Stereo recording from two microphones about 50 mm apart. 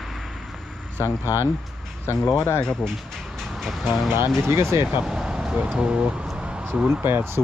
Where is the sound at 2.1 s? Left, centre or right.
Left.